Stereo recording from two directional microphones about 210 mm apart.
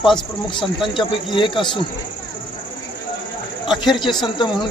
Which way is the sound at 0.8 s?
25° left (ahead or behind).